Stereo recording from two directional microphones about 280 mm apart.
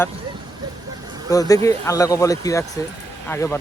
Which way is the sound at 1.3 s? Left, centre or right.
Centre.